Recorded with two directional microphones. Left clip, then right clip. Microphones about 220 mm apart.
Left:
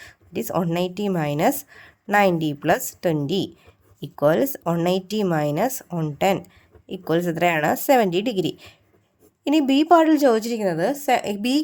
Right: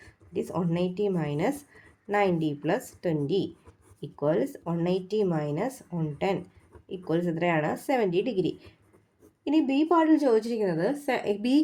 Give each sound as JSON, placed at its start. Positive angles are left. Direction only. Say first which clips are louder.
{"t": 0.0, "sound": "speech", "louder": "left 3 dB", "side_deg": 40}